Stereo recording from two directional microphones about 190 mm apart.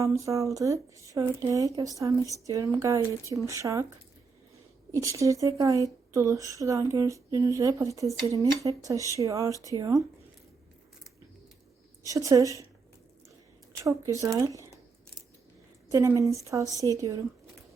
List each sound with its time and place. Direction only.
0.0 s speech: 15° right (ahead or behind)
4.9 s speech: 15° right (ahead or behind)
12.0 s speech: 15° right (ahead or behind)
13.8 s speech: 15° right (ahead or behind)
15.9 s speech: 15° right (ahead or behind)